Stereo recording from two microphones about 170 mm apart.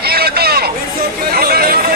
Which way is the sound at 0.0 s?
65° right (ahead or behind).